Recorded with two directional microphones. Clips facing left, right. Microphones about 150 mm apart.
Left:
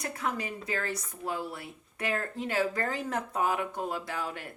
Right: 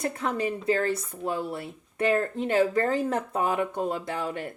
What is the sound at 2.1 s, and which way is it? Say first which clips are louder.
Speech: right 6 dB; 25° right (ahead or behind).